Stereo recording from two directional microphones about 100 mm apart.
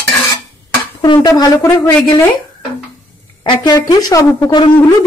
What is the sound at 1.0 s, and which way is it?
Speech, 45° left (ahead or behind).